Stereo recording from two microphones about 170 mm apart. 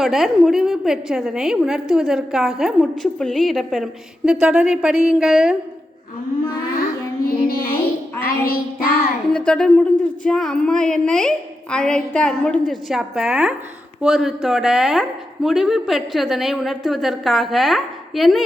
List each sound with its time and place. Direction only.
0.0 s speech: centre (ahead or behind)
7.3 s music: 60° left (ahead or behind)
8.2 s child singing: 60° left (ahead or behind)
9.3 s speech: 5° left (ahead or behind)